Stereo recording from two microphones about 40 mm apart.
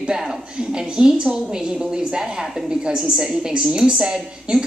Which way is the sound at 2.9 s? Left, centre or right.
Centre.